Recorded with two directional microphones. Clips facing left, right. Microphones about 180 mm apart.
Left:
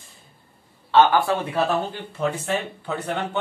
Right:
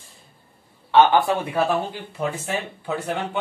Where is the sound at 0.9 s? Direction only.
20° right (ahead or behind).